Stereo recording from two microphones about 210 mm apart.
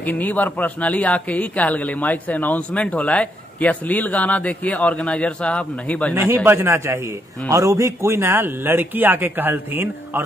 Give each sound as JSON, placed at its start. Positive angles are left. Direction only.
{"t": 0.0, "sound": "a man's voice", "side_deg": 10}
{"t": 6.1, "sound": "a man's voice", "side_deg": -10}